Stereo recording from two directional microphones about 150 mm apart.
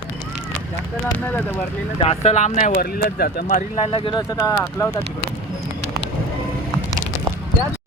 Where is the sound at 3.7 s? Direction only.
35° left (ahead or behind).